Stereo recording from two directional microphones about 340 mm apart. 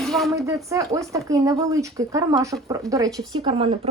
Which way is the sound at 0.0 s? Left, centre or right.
Centre.